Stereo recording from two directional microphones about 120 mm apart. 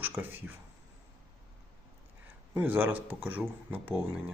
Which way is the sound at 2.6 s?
15° right (ahead or behind).